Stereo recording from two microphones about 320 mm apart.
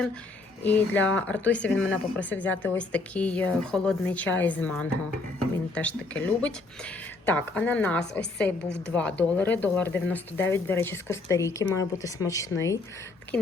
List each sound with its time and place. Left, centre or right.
0.6 s speech: centre